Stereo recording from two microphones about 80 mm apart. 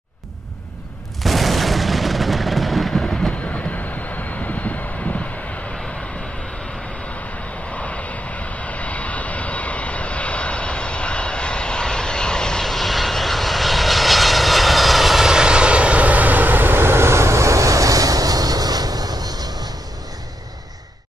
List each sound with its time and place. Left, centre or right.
1.2 s artillery fire: centre
3.7 s vehicle: left
7.7 s vehicle: centre; by 19.5 s right